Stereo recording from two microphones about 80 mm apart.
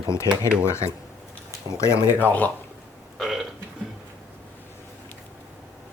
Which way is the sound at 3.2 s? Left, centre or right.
Centre.